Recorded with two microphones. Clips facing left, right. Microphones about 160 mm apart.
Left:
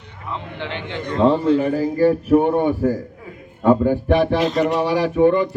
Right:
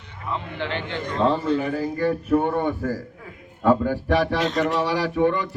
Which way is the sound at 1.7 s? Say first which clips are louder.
Left 6 dB; 35° left (ahead or behind).